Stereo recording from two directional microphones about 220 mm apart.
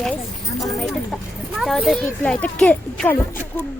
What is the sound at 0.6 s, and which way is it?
Speech, centre (ahead or behind).